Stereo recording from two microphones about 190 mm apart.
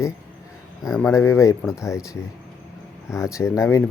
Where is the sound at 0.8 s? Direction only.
Centre (ahead or behind).